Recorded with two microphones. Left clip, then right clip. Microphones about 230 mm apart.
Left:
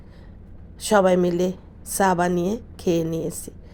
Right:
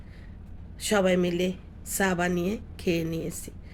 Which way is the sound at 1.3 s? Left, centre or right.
Centre.